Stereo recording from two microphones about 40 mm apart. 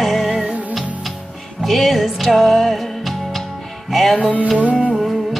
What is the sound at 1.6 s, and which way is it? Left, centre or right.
Music, centre.